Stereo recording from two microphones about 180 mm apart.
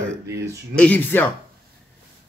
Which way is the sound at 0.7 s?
10° left (ahead or behind).